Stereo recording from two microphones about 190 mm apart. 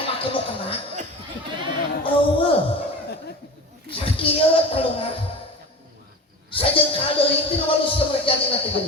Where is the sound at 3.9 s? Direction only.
30° left (ahead or behind).